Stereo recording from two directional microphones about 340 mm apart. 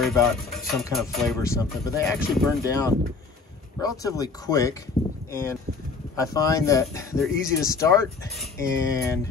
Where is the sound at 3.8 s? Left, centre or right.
Centre.